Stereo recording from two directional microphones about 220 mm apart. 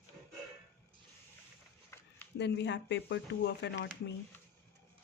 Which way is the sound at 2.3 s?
50° left (ahead or behind).